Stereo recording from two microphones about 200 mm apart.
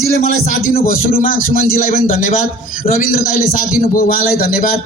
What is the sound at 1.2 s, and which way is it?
A man's voice, 45° left (ahead or behind).